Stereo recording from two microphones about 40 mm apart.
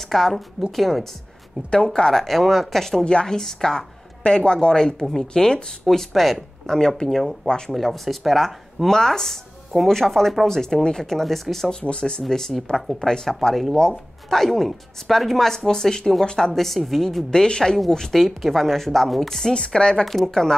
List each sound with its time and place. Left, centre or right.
0.0 s speech: centre
3.1 s speech: left
3.3 s speech: centre
5.9 s speech: centre
7.4 s speech: centre
7.7 s speech: centre
11.7 s speech: left
12.2 s speech: centre
16.5 s speech: centre
17.3 s speech: centre
19.5 s speech: left
20.1 s speech: centre